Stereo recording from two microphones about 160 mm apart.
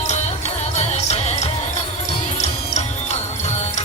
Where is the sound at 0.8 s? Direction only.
40° left (ahead or behind).